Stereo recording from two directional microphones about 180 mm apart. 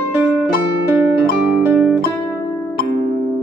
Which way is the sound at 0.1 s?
10° right (ahead or behind).